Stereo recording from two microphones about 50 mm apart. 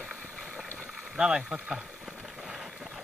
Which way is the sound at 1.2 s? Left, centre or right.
Centre.